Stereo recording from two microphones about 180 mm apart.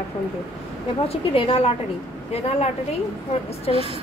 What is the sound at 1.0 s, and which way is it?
Speech, 30° left (ahead or behind).